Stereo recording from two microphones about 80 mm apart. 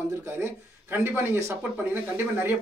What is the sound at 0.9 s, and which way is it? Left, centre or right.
Speech, right.